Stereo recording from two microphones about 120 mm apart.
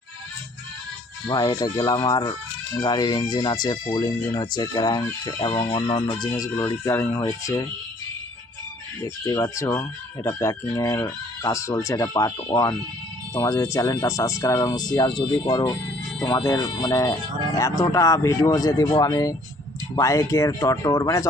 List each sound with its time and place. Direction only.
1.3 s speech: 30° left (ahead or behind)
9.2 s speech: 25° left (ahead or behind)